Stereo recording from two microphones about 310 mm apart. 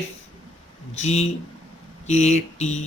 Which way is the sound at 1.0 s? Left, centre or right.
Left.